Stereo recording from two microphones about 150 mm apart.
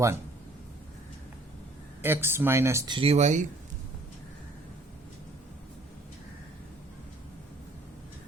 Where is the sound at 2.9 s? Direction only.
40° right (ahead or behind).